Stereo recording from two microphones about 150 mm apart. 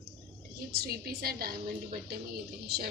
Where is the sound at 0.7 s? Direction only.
90° right.